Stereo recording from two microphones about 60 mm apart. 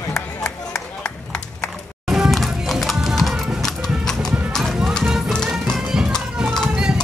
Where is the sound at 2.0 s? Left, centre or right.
Centre.